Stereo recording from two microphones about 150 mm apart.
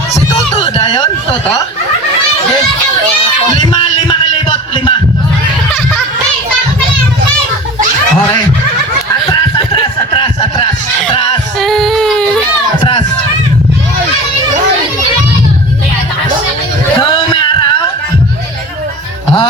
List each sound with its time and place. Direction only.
0.8 s speech: 30° left (ahead or behind)
3.6 s music: 30° left (ahead or behind)
9.3 s snicker: 35° left (ahead or behind)
11.6 s child singing: centre (ahead or behind)
17.0 s a sound: 30° left (ahead or behind)